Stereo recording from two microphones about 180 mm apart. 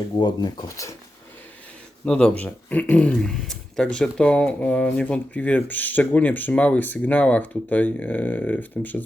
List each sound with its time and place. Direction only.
0.2 s speech: 25° left (ahead or behind)
2.0 s speech: 5° left (ahead or behind)